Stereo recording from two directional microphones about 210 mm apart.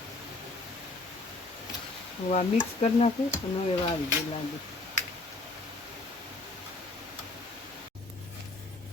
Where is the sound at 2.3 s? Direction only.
35° left (ahead or behind).